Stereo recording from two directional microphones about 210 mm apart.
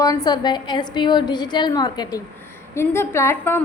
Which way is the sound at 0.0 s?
20° left (ahead or behind).